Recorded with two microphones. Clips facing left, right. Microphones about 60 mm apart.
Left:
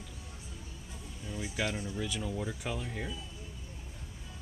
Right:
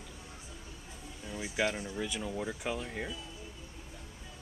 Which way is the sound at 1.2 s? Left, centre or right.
Centre.